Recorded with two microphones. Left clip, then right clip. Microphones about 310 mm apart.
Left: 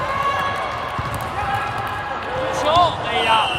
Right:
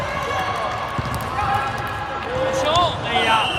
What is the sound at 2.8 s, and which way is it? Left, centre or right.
Basketball bounce, centre.